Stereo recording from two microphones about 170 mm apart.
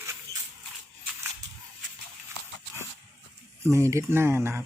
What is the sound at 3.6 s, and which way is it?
Speech, 15° right (ahead or behind).